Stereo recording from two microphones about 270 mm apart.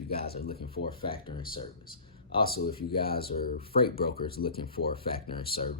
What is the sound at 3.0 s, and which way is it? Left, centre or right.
Speech, left.